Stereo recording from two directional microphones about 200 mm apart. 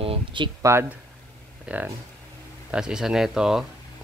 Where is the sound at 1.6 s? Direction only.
10° right (ahead or behind).